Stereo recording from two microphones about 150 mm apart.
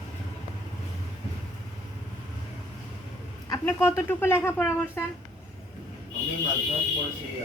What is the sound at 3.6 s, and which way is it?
Speech, 15° left (ahead or behind).